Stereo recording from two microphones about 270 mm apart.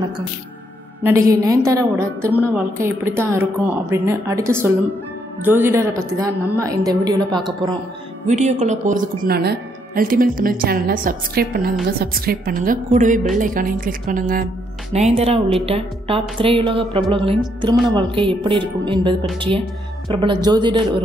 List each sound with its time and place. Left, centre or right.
1.0 s a woman's voice: centre
8.3 s a woman's voice: right